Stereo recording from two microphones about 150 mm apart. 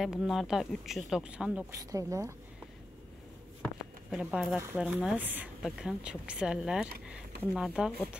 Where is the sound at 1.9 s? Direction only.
20° right (ahead or behind).